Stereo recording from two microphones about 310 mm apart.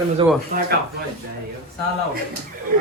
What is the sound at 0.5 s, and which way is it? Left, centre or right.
Speech, right.